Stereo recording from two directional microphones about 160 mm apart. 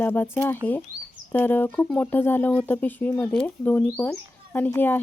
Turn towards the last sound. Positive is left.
turn(degrees=10)  # may be behind; listen again after turning